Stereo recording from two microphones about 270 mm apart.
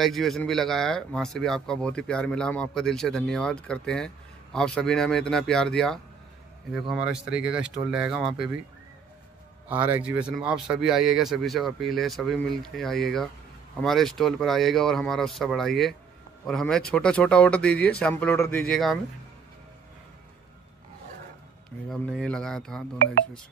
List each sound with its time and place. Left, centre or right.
0.0 s speech: centre
9.7 s speech: centre
21.8 s speech: centre